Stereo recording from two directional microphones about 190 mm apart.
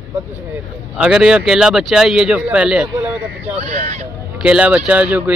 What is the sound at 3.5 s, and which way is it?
Speech, 35° right (ahead or behind).